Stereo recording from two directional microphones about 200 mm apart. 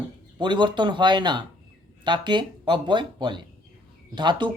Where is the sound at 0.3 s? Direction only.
25° right (ahead or behind).